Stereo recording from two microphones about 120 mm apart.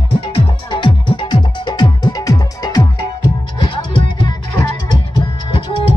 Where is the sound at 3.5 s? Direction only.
40° left (ahead or behind).